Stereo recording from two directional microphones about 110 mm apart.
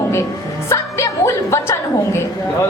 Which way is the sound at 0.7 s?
25° left (ahead or behind).